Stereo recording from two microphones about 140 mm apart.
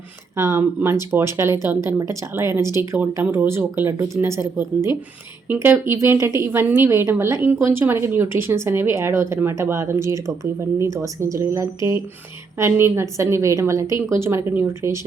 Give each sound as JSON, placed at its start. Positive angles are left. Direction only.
{"t": 0.3, "sound": "a woman's voice", "side_deg": -20}